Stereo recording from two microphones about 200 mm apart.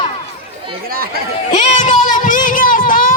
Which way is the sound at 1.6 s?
35° left (ahead or behind).